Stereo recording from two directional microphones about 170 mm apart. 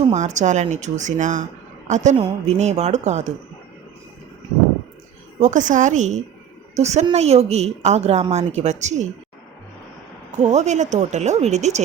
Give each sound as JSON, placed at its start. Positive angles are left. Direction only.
{"t": 0.1, "sound": "speech", "side_deg": -45}
{"t": 2.1, "sound": "a woman's voice", "side_deg": -35}
{"t": 5.4, "sound": "a woman's voice", "side_deg": -45}
{"t": 10.3, "sound": "speech", "side_deg": -45}